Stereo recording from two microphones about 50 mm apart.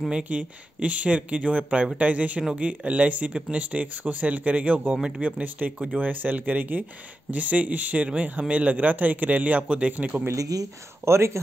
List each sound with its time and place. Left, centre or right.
0.2 s a man's voice: right
11.1 s speech: right